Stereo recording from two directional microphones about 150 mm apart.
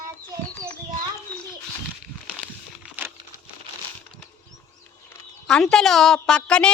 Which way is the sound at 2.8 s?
10° right (ahead or behind).